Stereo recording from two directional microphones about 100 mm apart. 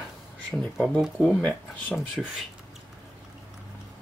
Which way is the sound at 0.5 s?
5° left (ahead or behind).